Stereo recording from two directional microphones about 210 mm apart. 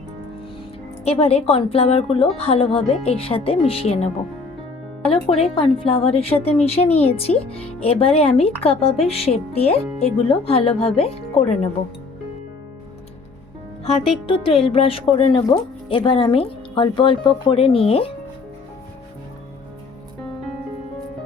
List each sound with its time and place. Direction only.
1.0 s speech: 30° left (ahead or behind)
5.4 s speech: 25° left (ahead or behind)
13.8 s speech: 25° left (ahead or behind)